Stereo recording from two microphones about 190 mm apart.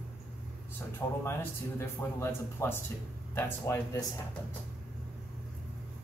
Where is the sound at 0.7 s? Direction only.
10° left (ahead or behind).